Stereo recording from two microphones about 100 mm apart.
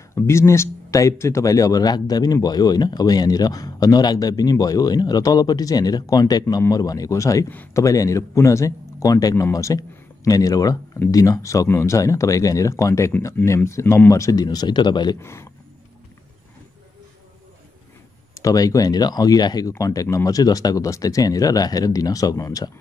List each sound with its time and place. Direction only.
0.1 s speech: 30° left (ahead or behind); by 15.1 s 50° left (ahead or behind)
15.1 s speech: 25° left (ahead or behind)
18.4 s speech: 35° left (ahead or behind)